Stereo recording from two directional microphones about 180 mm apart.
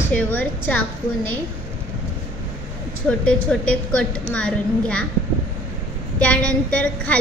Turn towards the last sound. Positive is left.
turn(degrees=5)  # may be behind; listen again after turning